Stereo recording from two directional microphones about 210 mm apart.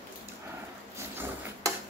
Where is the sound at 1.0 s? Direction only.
10° right (ahead or behind).